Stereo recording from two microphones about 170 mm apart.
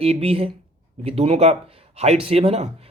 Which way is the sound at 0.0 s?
35° right (ahead or behind).